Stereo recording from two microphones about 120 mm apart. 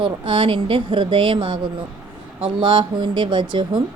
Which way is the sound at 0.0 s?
45° right (ahead or behind).